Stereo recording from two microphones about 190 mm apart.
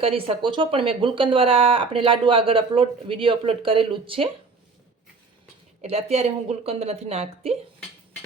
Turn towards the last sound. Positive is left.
turn(degrees=-35)  # may be behind; listen again after turning